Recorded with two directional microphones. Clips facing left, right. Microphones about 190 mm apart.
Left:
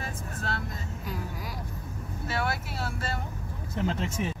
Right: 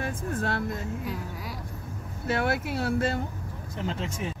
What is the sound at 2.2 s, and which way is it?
Speech, 55° right (ahead or behind).